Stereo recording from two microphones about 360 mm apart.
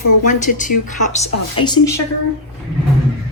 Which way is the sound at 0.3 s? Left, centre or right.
Left.